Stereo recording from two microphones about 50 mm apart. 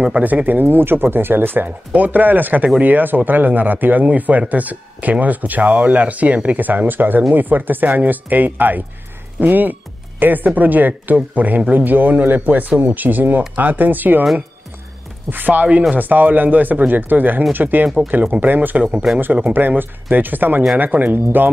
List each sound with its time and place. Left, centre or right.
0.2 s speech: right
1.9 s speech: right
15.2 s speech: right
19.1 s speech: centre
19.8 s speech: right